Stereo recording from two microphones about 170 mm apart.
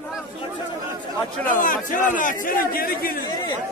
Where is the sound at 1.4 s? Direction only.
50° left (ahead or behind).